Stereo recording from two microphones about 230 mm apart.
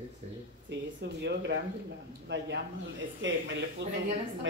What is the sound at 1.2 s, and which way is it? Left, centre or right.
Speech, right.